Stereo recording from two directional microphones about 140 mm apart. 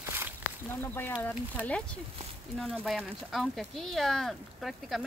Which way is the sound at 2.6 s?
5° left (ahead or behind).